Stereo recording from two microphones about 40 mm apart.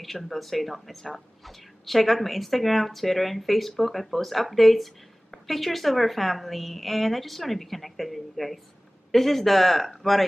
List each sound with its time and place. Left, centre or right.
0.0 s speech: centre